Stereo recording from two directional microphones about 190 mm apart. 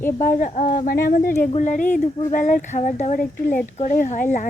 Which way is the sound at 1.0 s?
50° left (ahead or behind).